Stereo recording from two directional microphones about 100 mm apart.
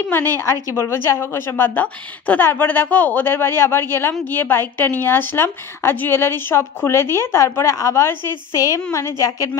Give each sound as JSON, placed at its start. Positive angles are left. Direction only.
{"t": 0.1, "sound": "a woman's voice", "side_deg": 20}